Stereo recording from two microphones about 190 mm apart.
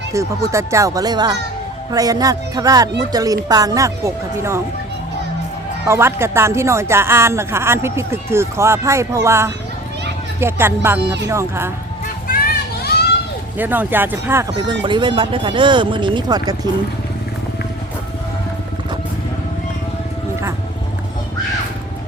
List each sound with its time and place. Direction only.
0.1 s speech: 15° right (ahead or behind)
5.9 s speech: 15° right (ahead or behind)
12.3 s children playing: 50° left (ahead or behind)
13.6 s speech: 10° right (ahead or behind)
14.7 s speech: 25° right (ahead or behind)